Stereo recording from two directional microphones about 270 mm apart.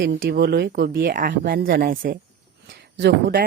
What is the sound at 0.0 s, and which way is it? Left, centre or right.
Speech, right.